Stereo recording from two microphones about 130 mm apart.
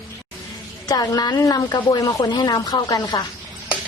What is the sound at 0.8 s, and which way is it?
A woman's voice, 30° left (ahead or behind).